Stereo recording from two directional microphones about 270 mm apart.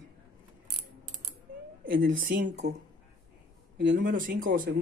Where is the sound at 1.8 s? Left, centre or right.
Right.